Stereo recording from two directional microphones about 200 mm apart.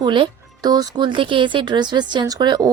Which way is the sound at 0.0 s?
25° right (ahead or behind).